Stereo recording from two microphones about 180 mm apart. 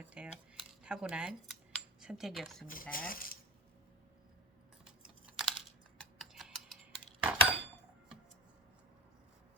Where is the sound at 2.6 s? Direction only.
50° left (ahead or behind).